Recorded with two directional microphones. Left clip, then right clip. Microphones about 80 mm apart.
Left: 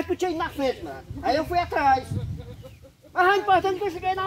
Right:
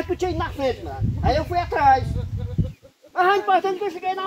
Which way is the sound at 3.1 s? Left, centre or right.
Left.